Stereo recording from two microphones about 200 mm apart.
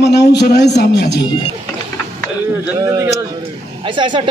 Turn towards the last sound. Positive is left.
turn(degrees=-25)  # may be behind; listen again after turning